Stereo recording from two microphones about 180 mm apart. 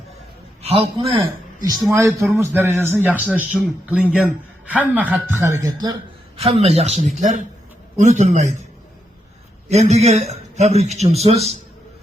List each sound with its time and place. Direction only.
0.6 s a man's voice: 35° right (ahead or behind)
1.9 s speech: 15° right (ahead or behind)
6.4 s a man's voice: 35° right (ahead or behind)
9.6 s a man's voice: 40° right (ahead or behind)